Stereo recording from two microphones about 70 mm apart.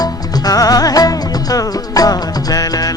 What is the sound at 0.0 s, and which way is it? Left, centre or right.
Music, left.